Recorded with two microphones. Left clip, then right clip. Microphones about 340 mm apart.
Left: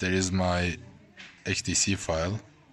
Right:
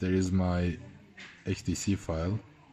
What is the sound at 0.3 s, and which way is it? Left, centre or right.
Speech, left.